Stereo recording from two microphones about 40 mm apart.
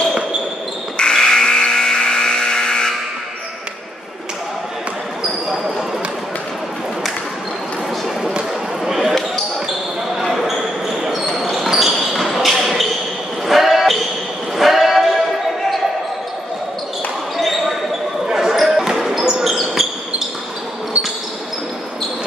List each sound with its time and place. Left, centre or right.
0.9 s a sound: centre
8.8 s basketball bounce: centre
10.3 s basketball bounce: centre
14.6 s a sound: centre
17.4 s basketball bounce: centre
18.2 s basketball bounce: centre
19.4 s basketball bounce: centre